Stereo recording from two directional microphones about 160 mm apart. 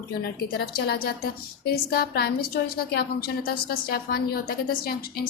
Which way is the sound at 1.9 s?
75° left (ahead or behind).